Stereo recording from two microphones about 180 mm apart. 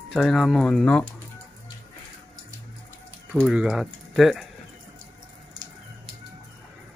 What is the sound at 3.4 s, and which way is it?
Speech, 5° right (ahead or behind).